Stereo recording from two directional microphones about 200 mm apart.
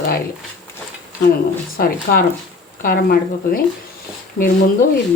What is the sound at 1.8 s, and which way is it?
Speech, 50° left (ahead or behind).